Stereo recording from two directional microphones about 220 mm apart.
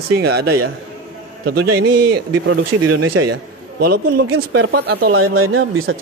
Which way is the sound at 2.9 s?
90° right.